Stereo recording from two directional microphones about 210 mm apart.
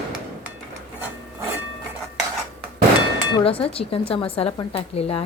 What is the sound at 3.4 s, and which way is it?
A woman's voice, 25° left (ahead or behind).